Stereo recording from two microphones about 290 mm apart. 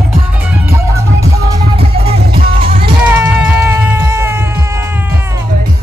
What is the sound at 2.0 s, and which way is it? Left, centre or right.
Music, centre.